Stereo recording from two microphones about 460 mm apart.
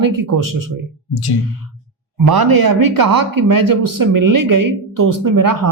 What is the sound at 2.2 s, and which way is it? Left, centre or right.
Speech, right.